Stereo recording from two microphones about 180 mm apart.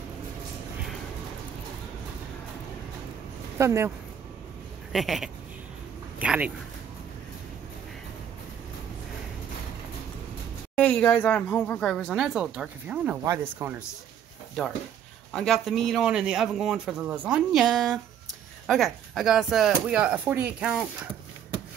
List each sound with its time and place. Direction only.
3.5 s speech: 15° right (ahead or behind)
4.9 s a man's voice: centre (ahead or behind)
10.8 s a man's voice: 10° left (ahead or behind)
13.2 s speech: 15° right (ahead or behind)
14.6 s a man's voice: centre (ahead or behind)